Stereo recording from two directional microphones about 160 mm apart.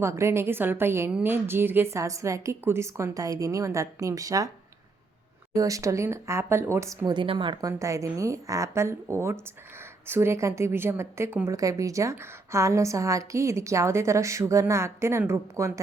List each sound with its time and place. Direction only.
0.0 s a woman's voice: 15° right (ahead or behind)
5.5 s a woman's voice: 20° right (ahead or behind)